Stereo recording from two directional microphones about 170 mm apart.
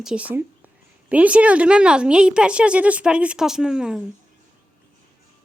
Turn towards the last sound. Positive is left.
turn(degrees=-5)  # may be behind; listen again after turning